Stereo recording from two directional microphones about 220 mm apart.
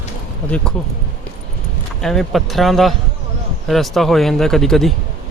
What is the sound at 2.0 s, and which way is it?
A man's voice, centre (ahead or behind).